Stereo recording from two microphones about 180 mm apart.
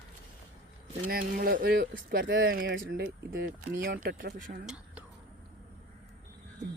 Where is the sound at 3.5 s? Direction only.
50° right (ahead or behind).